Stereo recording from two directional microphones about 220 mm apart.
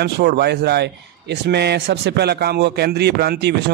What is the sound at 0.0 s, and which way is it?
A man's voice, 45° right (ahead or behind).